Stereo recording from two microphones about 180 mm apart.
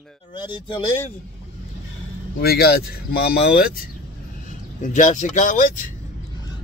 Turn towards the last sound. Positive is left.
turn(degrees=45)  # may be behind; listen again after turning